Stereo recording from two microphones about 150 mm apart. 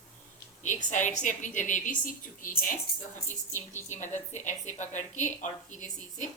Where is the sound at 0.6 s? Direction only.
55° left (ahead or behind).